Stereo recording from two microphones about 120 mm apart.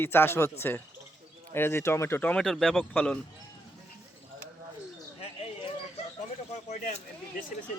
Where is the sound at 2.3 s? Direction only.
Centre (ahead or behind).